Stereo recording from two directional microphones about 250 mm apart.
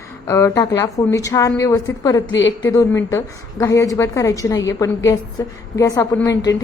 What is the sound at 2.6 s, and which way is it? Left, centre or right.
A woman's voice, centre.